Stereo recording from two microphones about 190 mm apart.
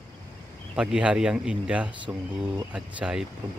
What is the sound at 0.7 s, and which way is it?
Speech, 5° right (ahead or behind).